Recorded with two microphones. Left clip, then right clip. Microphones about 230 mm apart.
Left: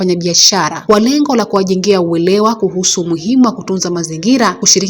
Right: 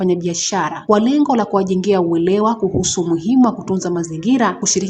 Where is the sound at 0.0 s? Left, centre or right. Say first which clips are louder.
Left 8 dB; centre.